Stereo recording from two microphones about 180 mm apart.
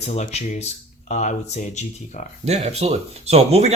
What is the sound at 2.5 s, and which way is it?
Speech, 35° right (ahead or behind).